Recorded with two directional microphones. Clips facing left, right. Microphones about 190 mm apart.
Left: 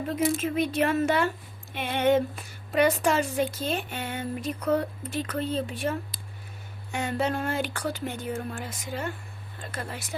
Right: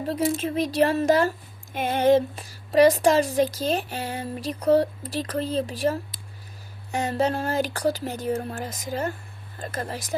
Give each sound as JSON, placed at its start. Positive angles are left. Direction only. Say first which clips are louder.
{"t": 0.1, "sound": "a woman's voice", "louder": "right 2 dB", "side_deg": -35}